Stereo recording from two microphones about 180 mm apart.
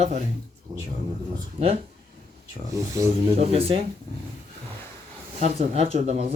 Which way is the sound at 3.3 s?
35° right (ahead or behind).